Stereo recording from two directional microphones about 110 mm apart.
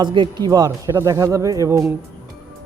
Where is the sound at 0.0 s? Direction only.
45° right (ahead or behind).